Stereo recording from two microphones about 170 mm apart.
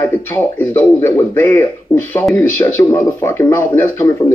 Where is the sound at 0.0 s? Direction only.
15° left (ahead or behind).